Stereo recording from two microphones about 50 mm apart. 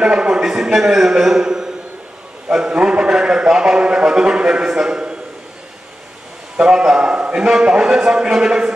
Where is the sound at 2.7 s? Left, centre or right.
Centre.